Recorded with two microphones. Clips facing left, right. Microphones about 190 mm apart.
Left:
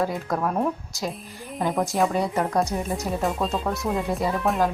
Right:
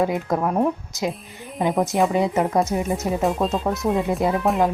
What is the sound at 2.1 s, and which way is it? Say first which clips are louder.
Speech: right 4 dB; 20° right (ahead or behind).